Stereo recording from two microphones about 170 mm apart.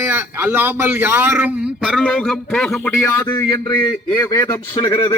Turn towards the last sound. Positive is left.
turn(degrees=20)  # may be behind; listen again after turning